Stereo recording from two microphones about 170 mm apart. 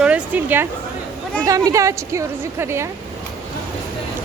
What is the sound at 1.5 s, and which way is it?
A woman's voice, 20° right (ahead or behind).